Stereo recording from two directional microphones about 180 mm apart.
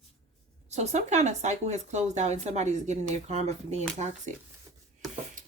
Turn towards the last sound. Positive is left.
turn(degrees=0)  # may be behind; listen again after turning